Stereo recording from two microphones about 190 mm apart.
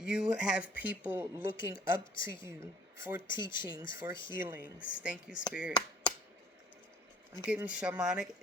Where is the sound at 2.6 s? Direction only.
15° right (ahead or behind).